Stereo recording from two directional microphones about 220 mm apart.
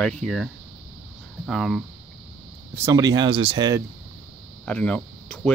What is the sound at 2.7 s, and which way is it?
Speech, 15° right (ahead or behind).